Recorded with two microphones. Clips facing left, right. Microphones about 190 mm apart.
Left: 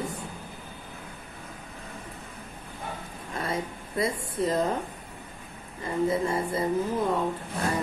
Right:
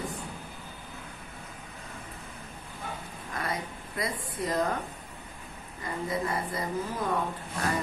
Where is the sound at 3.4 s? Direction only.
25° left (ahead or behind).